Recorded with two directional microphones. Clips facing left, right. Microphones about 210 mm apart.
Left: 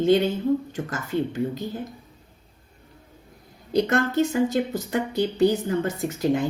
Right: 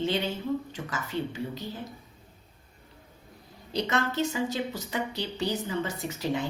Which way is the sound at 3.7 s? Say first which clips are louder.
Left 7 dB; 50° left (ahead or behind).